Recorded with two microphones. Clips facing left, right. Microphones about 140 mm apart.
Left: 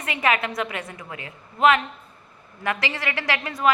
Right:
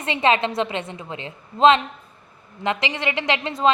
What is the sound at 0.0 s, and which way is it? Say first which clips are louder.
A woman's voice: right 4 dB; 25° right (ahead or behind).